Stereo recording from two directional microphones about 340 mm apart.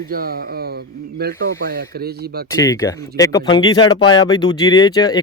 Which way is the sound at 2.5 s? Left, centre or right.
Centre.